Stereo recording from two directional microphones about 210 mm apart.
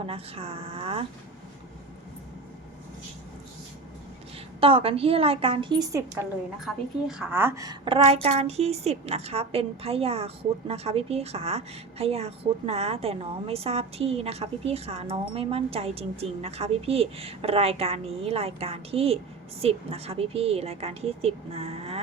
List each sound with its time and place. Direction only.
0.0 s a woman's voice: 25° right (ahead or behind)
4.6 s a woman's voice: 25° right (ahead or behind)
6.7 s a woman's voice: 5° right (ahead or behind); by 22.0 s 30° right (ahead or behind)